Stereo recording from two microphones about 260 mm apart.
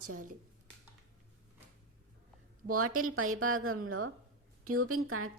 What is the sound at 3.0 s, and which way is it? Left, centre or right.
A woman's voice, right.